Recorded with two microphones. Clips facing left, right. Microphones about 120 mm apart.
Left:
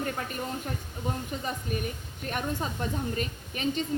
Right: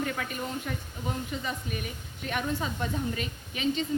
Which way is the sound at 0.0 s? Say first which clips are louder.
Even; 40° left (ahead or behind).